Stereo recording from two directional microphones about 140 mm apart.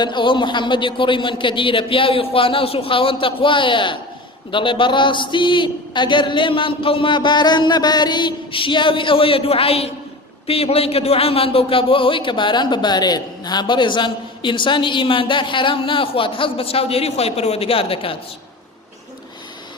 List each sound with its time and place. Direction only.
0.0 s a man's voice: 35° left (ahead or behind)